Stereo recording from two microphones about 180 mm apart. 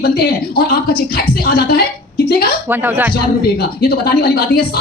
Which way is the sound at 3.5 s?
55° left (ahead or behind).